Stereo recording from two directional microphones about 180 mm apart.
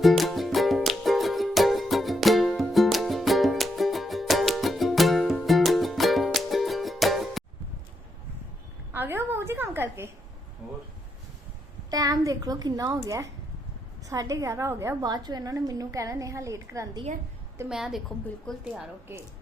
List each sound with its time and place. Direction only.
0.0 s music: centre (ahead or behind)
8.9 s a sound: 10° right (ahead or behind)
11.9 s a child's voice: 20° right (ahead or behind)
17.7 s a woman's voice: 5° right (ahead or behind)